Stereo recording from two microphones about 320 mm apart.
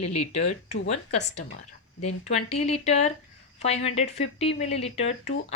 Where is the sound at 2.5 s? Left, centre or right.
Centre.